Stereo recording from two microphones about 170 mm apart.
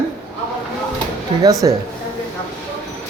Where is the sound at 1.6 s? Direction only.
25° right (ahead or behind).